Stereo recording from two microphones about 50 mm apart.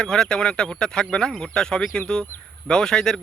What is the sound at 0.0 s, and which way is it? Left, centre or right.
Speech, centre.